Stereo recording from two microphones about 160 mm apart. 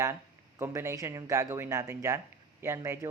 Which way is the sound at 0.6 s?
15° right (ahead or behind).